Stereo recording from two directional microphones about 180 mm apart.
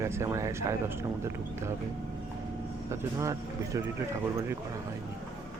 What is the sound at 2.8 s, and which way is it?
Speech, 15° right (ahead or behind).